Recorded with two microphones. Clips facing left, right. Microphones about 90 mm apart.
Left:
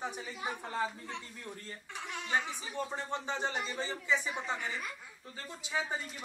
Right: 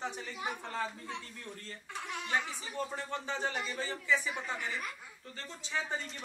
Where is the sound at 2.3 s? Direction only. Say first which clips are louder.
Left 1 dB; 15° left (ahead or behind).